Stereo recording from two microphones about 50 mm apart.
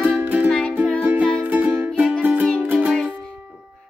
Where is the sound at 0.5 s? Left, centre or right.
Left.